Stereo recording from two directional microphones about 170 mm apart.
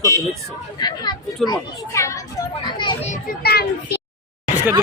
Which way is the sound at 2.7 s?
25° left (ahead or behind).